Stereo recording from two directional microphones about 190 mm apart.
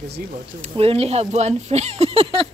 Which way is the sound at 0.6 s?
30° right (ahead or behind).